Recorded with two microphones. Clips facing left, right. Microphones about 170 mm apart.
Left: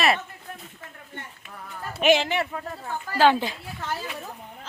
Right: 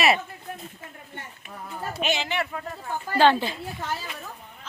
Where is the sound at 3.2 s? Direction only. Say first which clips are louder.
Even; 10° left (ahead or behind).